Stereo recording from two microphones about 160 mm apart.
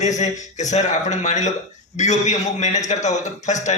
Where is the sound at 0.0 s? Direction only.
50° left (ahead or behind).